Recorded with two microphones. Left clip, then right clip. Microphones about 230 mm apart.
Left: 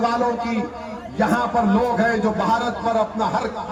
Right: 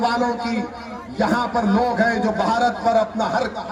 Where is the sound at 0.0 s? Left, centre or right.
Right.